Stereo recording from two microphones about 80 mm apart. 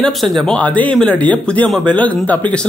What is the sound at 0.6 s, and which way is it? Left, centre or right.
Speech, centre.